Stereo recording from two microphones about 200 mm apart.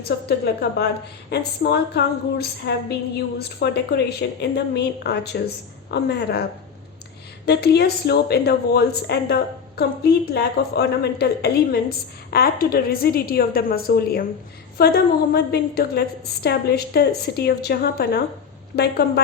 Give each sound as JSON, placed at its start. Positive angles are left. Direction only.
{"t": 0.3, "sound": "a woman's voice", "side_deg": 55}
{"t": 7.4, "sound": "a woman's voice", "side_deg": 55}